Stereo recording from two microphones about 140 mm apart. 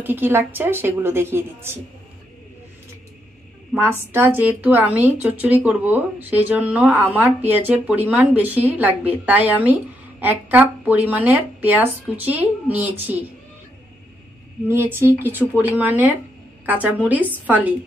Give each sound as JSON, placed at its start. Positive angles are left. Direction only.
{"t": 0.0, "sound": "speech", "side_deg": -15}
{"t": 4.1, "sound": "speech", "side_deg": -15}
{"t": 14.7, "sound": "speech", "side_deg": -15}